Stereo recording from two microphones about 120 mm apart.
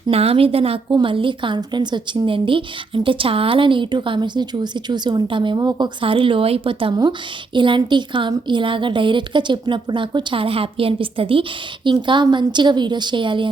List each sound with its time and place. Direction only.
0.1 s a woman's voice: 55° right (ahead or behind)